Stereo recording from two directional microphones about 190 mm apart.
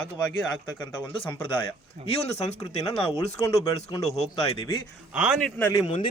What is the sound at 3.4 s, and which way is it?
Speech, 15° left (ahead or behind).